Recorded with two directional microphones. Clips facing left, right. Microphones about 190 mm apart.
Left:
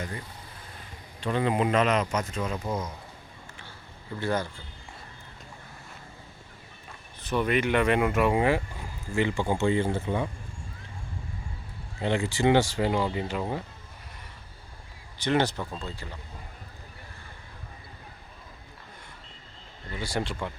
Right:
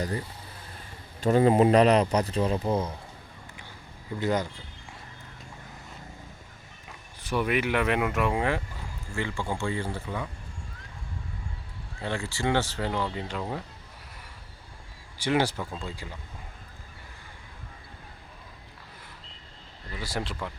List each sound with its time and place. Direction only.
1.2 s speech: 40° right (ahead or behind)
4.2 s speech: 15° right (ahead or behind)
7.2 s speech: 10° right (ahead or behind)
9.1 s speech: 20° left (ahead or behind)
11.9 s speech: 20° left (ahead or behind)
15.2 s speech: 10° right (ahead or behind)
20.0 s speech: centre (ahead or behind)